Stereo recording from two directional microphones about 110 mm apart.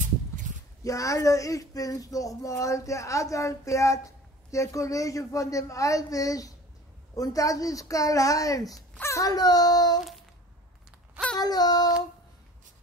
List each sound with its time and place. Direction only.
0.8 s a child's voice: 30° left (ahead or behind)
11.3 s a child's voice: 35° left (ahead or behind)